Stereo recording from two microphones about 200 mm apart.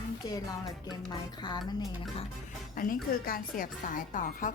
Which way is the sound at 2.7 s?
45° left (ahead or behind).